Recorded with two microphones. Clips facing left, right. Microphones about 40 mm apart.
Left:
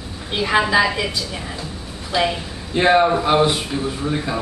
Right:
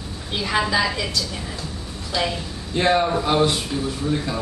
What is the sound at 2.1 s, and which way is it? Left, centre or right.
A man's voice, centre.